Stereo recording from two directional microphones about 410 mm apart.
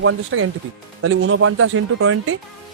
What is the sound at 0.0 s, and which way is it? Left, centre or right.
Speech, right.